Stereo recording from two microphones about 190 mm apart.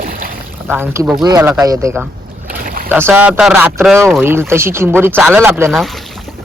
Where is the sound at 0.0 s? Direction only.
50° right (ahead or behind).